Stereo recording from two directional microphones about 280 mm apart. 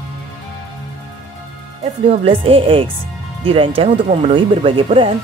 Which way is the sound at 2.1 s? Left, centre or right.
Centre.